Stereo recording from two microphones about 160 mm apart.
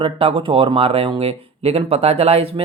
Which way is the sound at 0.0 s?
35° right (ahead or behind).